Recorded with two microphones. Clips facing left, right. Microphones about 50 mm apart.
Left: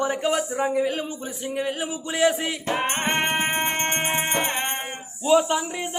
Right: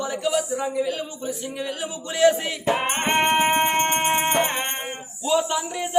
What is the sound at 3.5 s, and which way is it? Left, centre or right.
Music, centre.